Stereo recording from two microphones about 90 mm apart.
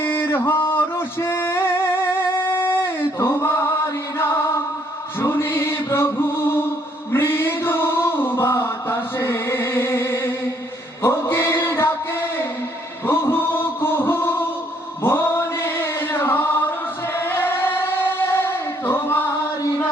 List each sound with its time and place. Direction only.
0.0 s music: 25° left (ahead or behind)
2.5 s a sound: 25° left (ahead or behind)
5.2 s music: 25° left (ahead or behind)
13.1 s music: 25° left (ahead or behind)
15.0 s male singing: 25° left (ahead or behind)
17.2 s music: 25° left (ahead or behind)